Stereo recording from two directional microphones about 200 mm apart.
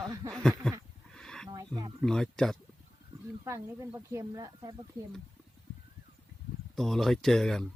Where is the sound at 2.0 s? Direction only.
Centre (ahead or behind).